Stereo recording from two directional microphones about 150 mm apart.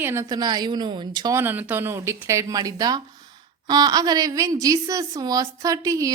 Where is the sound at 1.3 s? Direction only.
15° right (ahead or behind).